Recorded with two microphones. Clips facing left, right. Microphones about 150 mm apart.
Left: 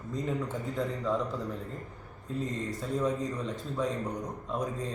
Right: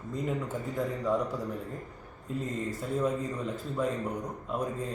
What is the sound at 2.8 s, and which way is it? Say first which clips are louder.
Speech: even; 10° right (ahead or behind).